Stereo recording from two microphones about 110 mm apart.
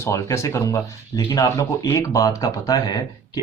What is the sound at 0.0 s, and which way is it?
Speech, 25° left (ahead or behind).